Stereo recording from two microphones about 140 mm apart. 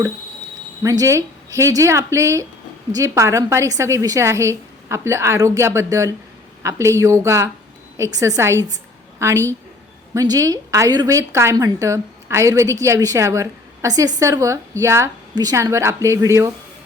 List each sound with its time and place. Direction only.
0.8 s a woman's voice: 25° right (ahead or behind)